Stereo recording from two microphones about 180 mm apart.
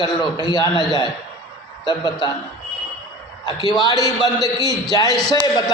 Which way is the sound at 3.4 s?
25° left (ahead or behind).